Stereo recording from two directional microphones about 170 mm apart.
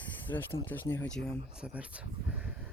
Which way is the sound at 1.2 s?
5° right (ahead or behind).